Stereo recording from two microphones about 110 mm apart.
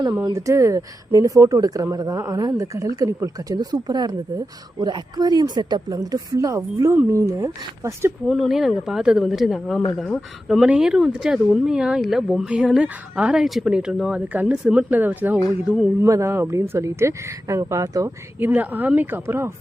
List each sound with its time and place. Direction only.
0.3 s speech: 30° right (ahead or behind)
8.3 s speech: centre (ahead or behind)
16.0 s speech: 25° right (ahead or behind)
18.3 s speech: 15° right (ahead or behind)